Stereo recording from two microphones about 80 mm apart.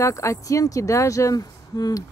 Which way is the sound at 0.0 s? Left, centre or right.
Left.